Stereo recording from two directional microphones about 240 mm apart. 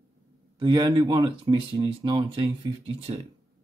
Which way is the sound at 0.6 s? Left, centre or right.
Centre.